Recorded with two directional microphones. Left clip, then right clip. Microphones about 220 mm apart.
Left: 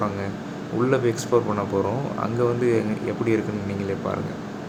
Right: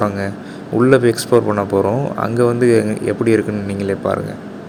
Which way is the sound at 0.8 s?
25° right (ahead or behind).